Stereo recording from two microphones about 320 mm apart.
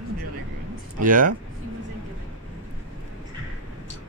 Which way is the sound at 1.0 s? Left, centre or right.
Right.